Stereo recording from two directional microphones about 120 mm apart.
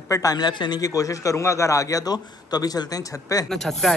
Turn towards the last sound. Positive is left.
turn(degrees=5)  # may be behind; listen again after turning